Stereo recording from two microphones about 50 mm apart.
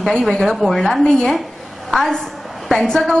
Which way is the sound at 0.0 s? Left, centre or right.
Centre.